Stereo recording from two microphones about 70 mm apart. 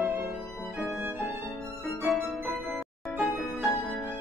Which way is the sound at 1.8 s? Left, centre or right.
Centre.